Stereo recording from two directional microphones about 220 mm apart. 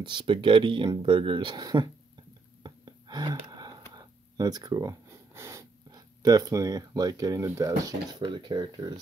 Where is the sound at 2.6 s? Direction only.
20° right (ahead or behind).